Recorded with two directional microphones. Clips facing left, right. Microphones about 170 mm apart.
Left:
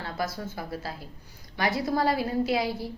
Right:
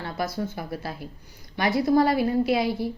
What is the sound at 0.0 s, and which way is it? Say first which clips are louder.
Speech: right 3 dB; 20° right (ahead or behind).